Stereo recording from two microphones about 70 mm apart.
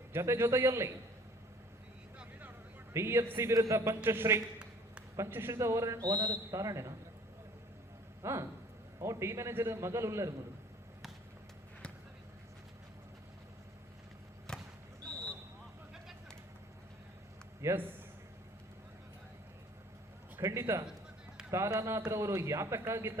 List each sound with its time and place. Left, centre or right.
0.1 s a man's voice: right
2.9 s a man's voice: right
8.2 s a man's voice: right
14.5 s basketball bounce: centre
17.6 s a man's voice: right
20.4 s a man's voice: right